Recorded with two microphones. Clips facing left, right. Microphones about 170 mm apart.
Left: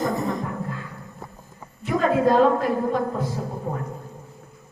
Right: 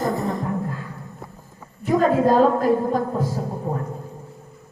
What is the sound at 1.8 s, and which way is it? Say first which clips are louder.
A woman's voice: right 2 dB; 40° right (ahead or behind).